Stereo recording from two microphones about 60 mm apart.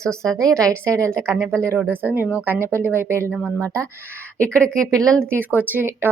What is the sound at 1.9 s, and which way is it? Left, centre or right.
Speech, right.